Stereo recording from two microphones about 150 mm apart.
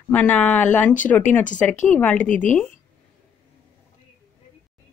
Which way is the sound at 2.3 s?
60° left (ahead or behind).